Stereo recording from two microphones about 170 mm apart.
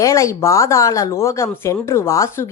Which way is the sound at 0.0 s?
15° left (ahead or behind).